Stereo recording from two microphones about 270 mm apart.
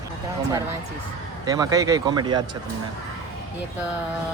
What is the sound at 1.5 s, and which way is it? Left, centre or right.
Speech, centre.